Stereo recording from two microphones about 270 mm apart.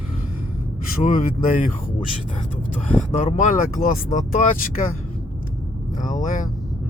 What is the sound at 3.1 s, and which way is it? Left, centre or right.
Speech, left.